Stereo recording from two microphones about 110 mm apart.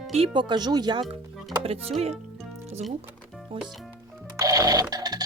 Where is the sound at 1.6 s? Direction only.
60° right (ahead or behind).